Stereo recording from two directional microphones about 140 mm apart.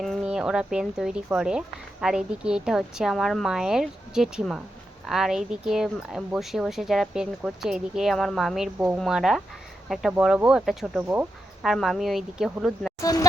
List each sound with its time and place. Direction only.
0.0 s speech: centre (ahead or behind)
13.0 s speech: 25° left (ahead or behind)